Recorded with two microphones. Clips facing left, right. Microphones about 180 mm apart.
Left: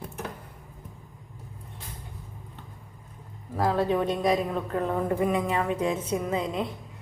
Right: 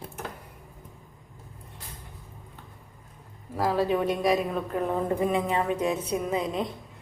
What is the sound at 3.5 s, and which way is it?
A woman's voice, 10° right (ahead or behind).